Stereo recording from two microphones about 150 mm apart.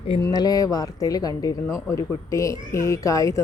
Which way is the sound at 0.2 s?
25° left (ahead or behind).